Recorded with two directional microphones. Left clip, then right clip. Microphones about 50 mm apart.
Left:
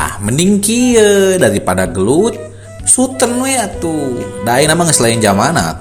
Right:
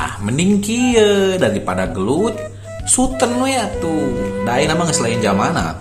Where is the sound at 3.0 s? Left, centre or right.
Left.